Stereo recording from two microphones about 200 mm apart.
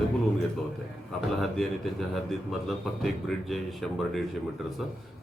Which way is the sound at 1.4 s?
Centre (ahead or behind).